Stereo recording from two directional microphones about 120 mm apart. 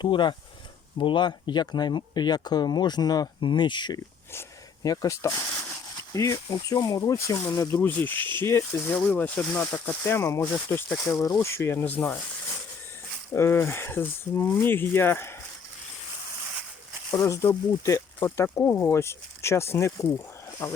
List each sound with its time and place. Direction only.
0.0 s speech: 40° left (ahead or behind)
4.3 s speech: 25° left (ahead or behind)
7.8 s speech: 15° left (ahead or behind)
13.3 s speech: 20° left (ahead or behind)
17.1 s speech: 25° left (ahead or behind)